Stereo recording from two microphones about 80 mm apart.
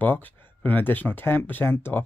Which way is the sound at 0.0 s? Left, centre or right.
Left.